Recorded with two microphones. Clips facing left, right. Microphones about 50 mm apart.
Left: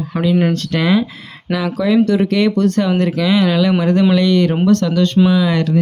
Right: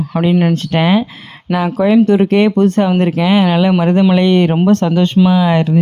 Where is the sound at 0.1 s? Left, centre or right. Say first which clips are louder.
Right 3 dB; centre.